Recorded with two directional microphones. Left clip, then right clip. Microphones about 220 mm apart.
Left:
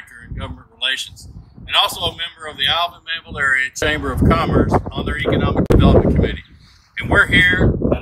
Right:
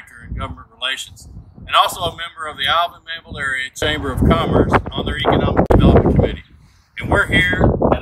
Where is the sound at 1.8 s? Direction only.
30° right (ahead or behind).